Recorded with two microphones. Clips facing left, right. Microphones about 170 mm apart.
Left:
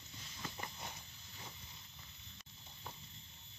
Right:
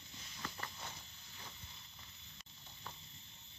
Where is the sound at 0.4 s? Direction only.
15° left (ahead or behind).